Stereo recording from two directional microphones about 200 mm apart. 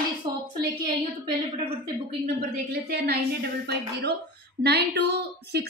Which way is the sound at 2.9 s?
50° right (ahead or behind).